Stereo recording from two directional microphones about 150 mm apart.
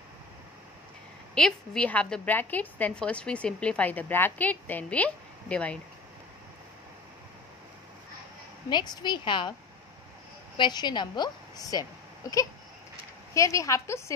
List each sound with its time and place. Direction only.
1.3 s a woman's voice: 5° left (ahead or behind)
8.6 s a woman's voice: 30° left (ahead or behind)
10.6 s a woman's voice: 30° left (ahead or behind)